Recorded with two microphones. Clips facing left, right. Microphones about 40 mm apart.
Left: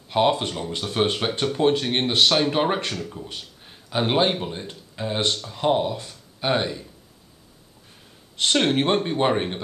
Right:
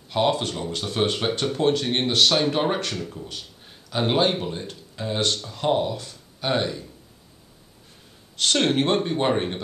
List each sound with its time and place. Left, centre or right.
0.1 s a man's voice: centre
8.4 s speech: left